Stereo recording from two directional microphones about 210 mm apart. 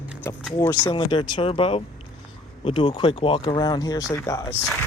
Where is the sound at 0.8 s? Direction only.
25° left (ahead or behind).